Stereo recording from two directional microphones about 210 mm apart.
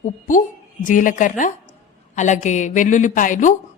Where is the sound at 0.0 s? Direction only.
40° left (ahead or behind).